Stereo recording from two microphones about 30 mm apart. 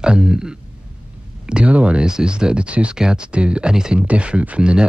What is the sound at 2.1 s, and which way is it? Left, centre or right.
Speech, right.